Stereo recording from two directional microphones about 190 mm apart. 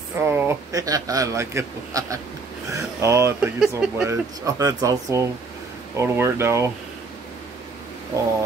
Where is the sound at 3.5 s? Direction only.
5° right (ahead or behind).